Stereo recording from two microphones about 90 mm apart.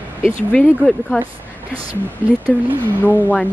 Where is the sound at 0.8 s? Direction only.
5° left (ahead or behind).